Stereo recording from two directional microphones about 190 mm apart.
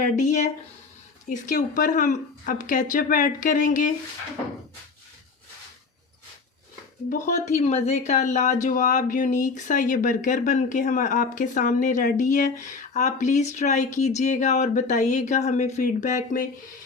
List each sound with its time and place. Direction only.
0.0 s speech: 40° left (ahead or behind)
7.1 s speech: 40° left (ahead or behind)